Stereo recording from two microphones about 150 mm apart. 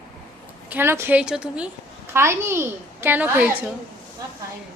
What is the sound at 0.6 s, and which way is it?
A child's voice, 15° right (ahead or behind).